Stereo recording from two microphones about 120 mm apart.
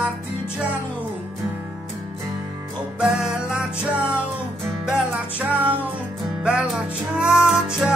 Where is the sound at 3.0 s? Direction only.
5° right (ahead or behind).